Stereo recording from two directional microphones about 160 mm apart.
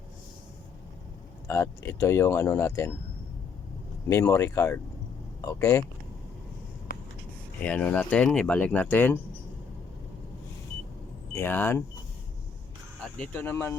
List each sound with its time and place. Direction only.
1.5 s speech: 15° left (ahead or behind)
4.1 s speech: 15° left (ahead or behind)
7.6 s speech: 10° left (ahead or behind)
11.3 s speech: 15° left (ahead or behind)
13.0 s speech: 5° left (ahead or behind)